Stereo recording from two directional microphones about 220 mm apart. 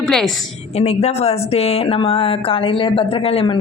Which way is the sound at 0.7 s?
30° left (ahead or behind).